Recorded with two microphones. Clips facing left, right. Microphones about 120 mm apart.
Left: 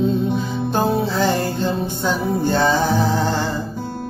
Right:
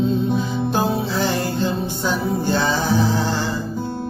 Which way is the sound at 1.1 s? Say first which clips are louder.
Left 2 dB; 45° left (ahead or behind).